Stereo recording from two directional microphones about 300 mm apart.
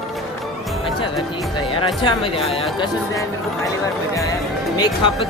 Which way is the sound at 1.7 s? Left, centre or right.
Centre.